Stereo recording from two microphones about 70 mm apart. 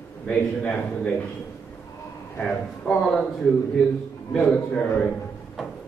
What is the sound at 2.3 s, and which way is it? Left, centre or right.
Speech, centre.